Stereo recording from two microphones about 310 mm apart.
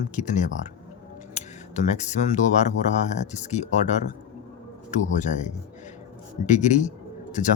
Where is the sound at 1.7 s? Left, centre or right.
Left.